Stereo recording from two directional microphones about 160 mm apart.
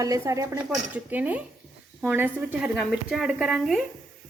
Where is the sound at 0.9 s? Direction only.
10° right (ahead or behind).